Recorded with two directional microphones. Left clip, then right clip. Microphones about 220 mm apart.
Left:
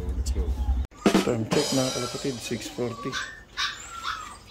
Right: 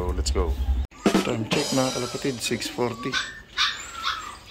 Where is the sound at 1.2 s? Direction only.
15° left (ahead or behind).